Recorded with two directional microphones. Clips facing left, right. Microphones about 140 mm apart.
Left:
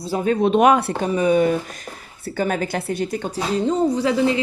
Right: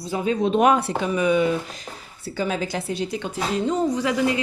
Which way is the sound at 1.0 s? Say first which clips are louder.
Left 3 dB; 40° left (ahead or behind).